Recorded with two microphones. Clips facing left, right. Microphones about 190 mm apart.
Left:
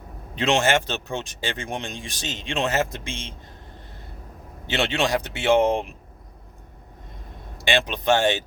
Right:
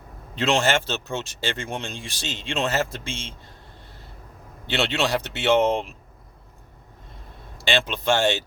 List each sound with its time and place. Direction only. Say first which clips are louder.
0.3 s speech: left 1 dB; 15° left (ahead or behind)
4.6 s speech: even; 15° left (ahead or behind)
7.6 s speech: left 1 dB; 15° left (ahead or behind)